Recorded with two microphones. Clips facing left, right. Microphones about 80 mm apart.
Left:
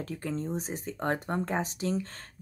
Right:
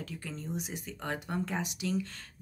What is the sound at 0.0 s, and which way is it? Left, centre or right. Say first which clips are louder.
A woman's voice: left 7 dB; left.